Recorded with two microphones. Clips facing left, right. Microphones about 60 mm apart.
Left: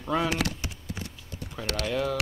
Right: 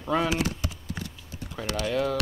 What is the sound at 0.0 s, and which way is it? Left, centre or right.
Speech, centre.